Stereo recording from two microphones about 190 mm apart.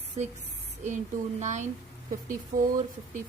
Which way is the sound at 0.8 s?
40° right (ahead or behind).